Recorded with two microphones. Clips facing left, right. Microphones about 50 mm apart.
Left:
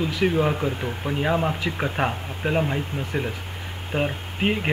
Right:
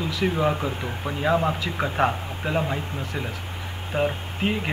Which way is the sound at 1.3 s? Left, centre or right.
Centre.